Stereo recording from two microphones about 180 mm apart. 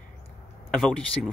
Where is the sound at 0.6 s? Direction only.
5° left (ahead or behind).